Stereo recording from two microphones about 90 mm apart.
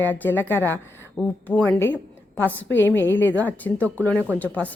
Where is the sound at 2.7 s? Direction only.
25° left (ahead or behind).